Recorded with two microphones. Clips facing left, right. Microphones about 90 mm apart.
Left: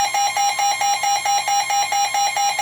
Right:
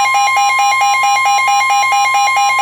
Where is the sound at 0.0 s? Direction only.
55° right (ahead or behind).